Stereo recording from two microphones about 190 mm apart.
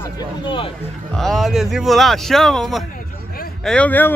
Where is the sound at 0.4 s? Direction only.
25° left (ahead or behind).